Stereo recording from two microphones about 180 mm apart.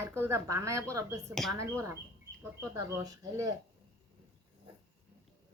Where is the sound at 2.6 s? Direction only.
20° right (ahead or behind).